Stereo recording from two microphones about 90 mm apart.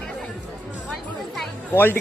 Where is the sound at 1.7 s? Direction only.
20° left (ahead or behind).